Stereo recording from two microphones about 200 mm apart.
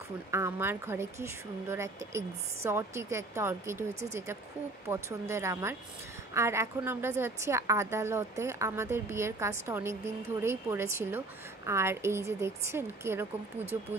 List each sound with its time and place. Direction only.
0.3 s a woman's voice: 10° right (ahead or behind)
4.8 s a woman's voice: 15° right (ahead or behind)